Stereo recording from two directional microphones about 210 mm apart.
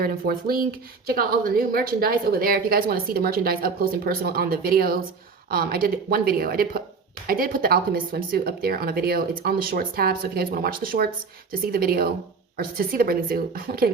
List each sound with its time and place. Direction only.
0.0 s speech: 45° right (ahead or behind)